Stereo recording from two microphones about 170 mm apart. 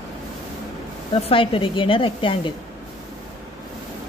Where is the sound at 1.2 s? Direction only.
30° left (ahead or behind).